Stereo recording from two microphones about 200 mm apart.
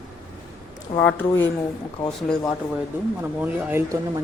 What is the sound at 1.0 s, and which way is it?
Speech, 5° left (ahead or behind).